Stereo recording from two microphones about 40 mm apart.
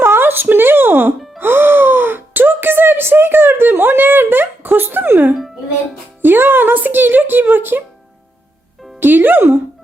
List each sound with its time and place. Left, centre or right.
0.0 s a sound: right
1.4 s gasp: right
6.2 s speech: right
9.0 s speech: right